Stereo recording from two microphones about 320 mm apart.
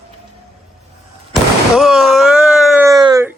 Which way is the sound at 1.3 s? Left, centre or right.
Centre.